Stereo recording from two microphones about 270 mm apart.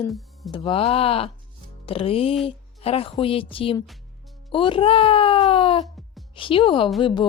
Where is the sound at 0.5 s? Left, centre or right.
Centre.